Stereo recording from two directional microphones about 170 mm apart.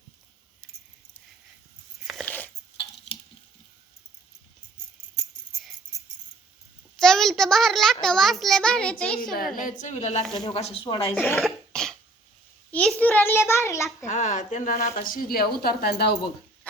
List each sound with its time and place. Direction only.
2.0 s dog: 5° left (ahead or behind)
7.0 s a sound: 5° left (ahead or behind)
8.0 s a child's voice: centre (ahead or behind)
9.6 s a woman's voice: 50° left (ahead or behind); by 11.1 s 30° left (ahead or behind)
11.3 s cough: centre (ahead or behind)
12.7 s a child's voice: 5° left (ahead or behind)
14.1 s speech: 45° left (ahead or behind); by 16.1 s 70° left (ahead or behind)